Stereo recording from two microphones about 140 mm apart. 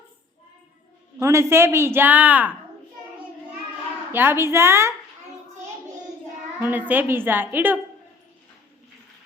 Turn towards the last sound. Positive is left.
turn(degrees=-15)  # may be behind; listen again after turning